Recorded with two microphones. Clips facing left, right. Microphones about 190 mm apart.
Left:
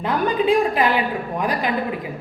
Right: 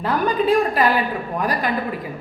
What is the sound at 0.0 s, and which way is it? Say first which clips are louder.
A woman's voice: even; 20° left (ahead or behind).